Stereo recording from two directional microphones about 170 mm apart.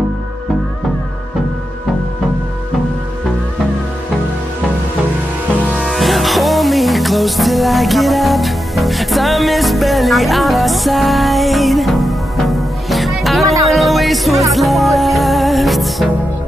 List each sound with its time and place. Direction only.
5.7 s music: centre (ahead or behind)